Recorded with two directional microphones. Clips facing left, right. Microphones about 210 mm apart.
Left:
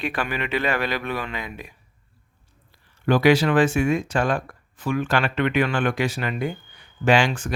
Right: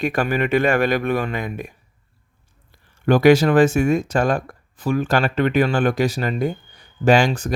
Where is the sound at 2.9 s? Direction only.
45° right (ahead or behind).